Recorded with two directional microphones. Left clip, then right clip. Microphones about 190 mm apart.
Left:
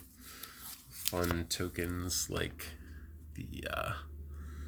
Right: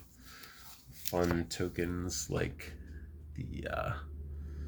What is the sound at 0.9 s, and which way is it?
Speech, 25° left (ahead or behind).